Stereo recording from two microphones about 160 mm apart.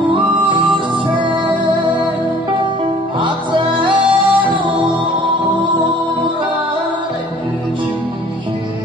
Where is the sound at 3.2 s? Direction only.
30° right (ahead or behind).